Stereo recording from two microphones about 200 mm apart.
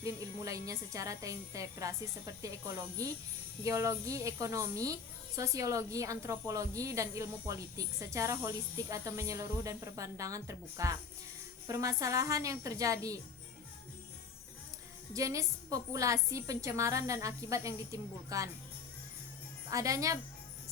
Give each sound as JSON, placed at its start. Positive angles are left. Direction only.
{"t": 0.0, "sound": "a woman's voice", "side_deg": -15}
{"t": 3.6, "sound": "a woman's voice", "side_deg": -15}
{"t": 15.1, "sound": "a woman's voice", "side_deg": -15}
{"t": 19.7, "sound": "a woman's voice", "side_deg": -15}